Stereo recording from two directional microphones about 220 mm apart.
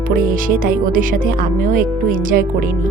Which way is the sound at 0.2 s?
40° right (ahead or behind).